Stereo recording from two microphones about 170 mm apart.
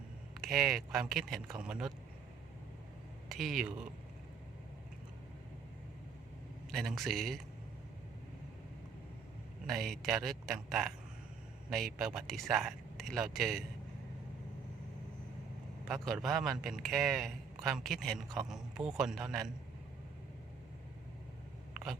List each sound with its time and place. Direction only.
0.4 s a man's voice: centre (ahead or behind)
3.2 s speech: centre (ahead or behind)
6.7 s a man's voice: centre (ahead or behind)
9.6 s a man's voice: centre (ahead or behind)
15.9 s a man's voice: centre (ahead or behind)